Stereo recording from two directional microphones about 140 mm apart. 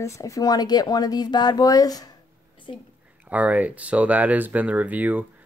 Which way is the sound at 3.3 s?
10° right (ahead or behind).